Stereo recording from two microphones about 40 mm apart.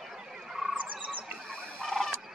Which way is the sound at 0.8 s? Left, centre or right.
Right.